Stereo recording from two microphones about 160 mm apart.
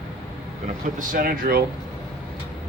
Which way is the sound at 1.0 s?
60° right (ahead or behind).